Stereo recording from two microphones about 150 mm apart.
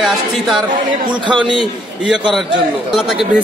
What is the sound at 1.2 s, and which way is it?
Speech, 30° right (ahead or behind).